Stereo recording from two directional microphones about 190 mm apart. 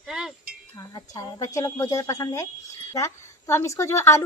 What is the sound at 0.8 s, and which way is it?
A woman's voice, 20° left (ahead or behind).